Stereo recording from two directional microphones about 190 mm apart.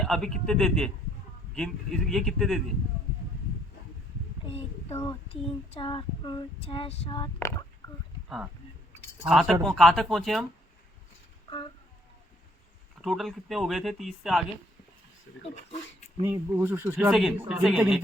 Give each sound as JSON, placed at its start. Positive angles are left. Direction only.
{"t": 0.0, "sound": "speech", "side_deg": 0}
{"t": 4.4, "sound": "a sound", "side_deg": 30}
{"t": 5.3, "sound": "child singing", "side_deg": 30}
{"t": 7.3, "sound": "speech", "side_deg": 15}
{"t": 9.2, "sound": "speech", "side_deg": 0}
{"t": 13.0, "sound": "speech", "side_deg": 0}
{"t": 16.2, "sound": "speech", "side_deg": -10}